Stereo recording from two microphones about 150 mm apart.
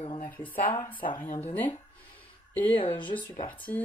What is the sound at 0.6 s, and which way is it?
Speech, 25° left (ahead or behind).